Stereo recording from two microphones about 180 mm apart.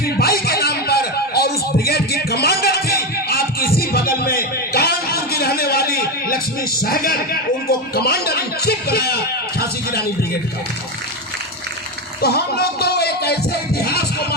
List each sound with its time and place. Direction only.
0.0 s a sound: 55° left (ahead or behind)
3.8 s music: 55° left (ahead or behind)
12.2 s music: 60° left (ahead or behind)